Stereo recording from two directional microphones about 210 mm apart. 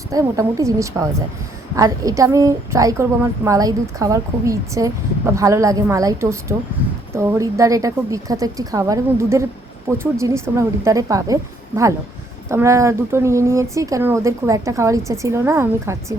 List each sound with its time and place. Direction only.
0.1 s a woman's voice: 15° right (ahead or behind)